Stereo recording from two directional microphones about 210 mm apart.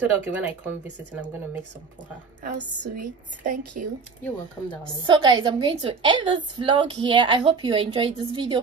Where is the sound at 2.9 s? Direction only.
40° right (ahead or behind).